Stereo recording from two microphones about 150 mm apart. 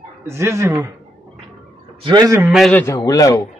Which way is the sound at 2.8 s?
20° left (ahead or behind).